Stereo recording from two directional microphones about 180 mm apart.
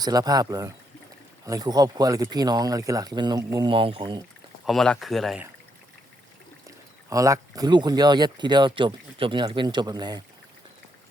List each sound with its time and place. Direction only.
0.0 s speech: 20° right (ahead or behind)
4.6 s speech: centre (ahead or behind)
6.7 s speech: 20° right (ahead or behind)